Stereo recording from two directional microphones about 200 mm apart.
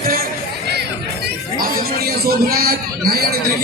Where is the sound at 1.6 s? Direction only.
45° right (ahead or behind).